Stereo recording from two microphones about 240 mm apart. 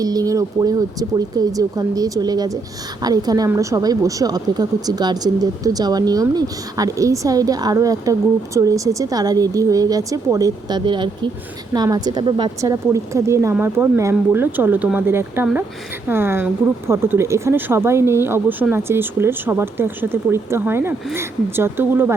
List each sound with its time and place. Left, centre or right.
0.0 s speech: centre